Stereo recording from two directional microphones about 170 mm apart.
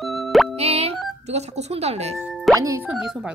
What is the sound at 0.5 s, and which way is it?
Speech, 40° right (ahead or behind).